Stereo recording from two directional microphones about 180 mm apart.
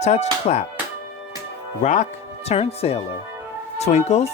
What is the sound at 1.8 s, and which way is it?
Speech, 40° left (ahead or behind).